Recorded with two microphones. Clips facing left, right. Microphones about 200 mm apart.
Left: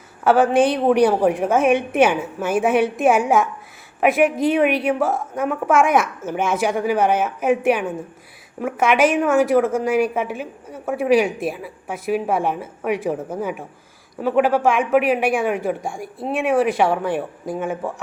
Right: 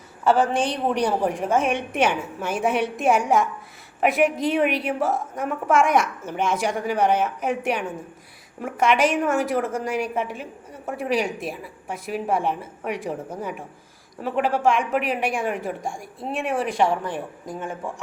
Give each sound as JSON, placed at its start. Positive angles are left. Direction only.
{"t": 0.4, "sound": "a woman's voice", "side_deg": 60}
{"t": 1.2, "sound": "a woman's voice", "side_deg": 5}